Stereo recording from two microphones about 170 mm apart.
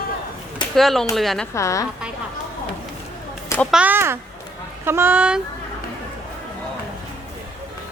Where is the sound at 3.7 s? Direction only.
10° right (ahead or behind).